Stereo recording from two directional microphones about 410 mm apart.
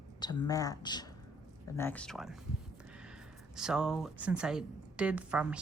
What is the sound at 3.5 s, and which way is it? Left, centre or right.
A woman's voice, centre.